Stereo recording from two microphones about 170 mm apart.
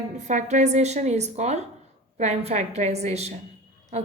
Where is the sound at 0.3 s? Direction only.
45° right (ahead or behind).